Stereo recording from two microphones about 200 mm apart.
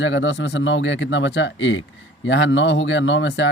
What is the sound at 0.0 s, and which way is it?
Speech, 70° left (ahead or behind).